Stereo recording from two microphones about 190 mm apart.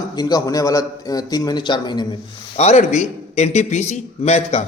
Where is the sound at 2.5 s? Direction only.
35° left (ahead or behind).